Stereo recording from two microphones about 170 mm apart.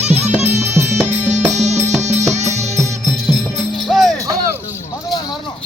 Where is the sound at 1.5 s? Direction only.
45° right (ahead or behind).